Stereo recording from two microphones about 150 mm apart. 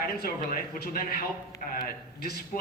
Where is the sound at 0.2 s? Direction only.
90° left.